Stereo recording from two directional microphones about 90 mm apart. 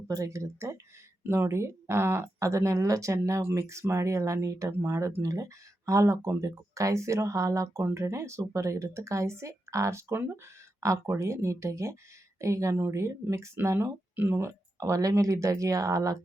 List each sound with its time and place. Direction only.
0.1 s speech: 35° right (ahead or behind)